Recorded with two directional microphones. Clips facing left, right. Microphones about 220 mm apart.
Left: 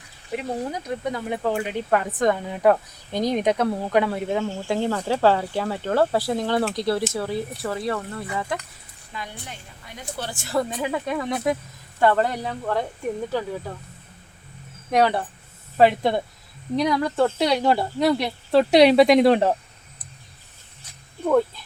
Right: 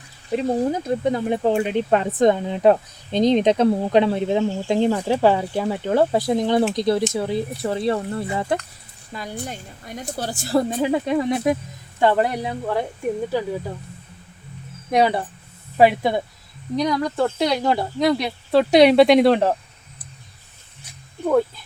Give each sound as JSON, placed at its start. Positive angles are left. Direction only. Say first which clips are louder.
{"t": 0.3, "sound": "speech", "louder": "right 7 dB", "side_deg": -30}
{"t": 9.1, "sound": "a woman's voice", "louder": "right 6 dB", "side_deg": -40}
{"t": 14.8, "sound": "speech", "louder": "right 1 dB", "side_deg": -10}
{"t": 16.7, "sound": "speech", "louder": "even", "side_deg": 5}